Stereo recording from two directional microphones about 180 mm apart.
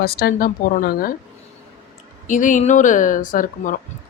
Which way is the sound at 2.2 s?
45° left (ahead or behind).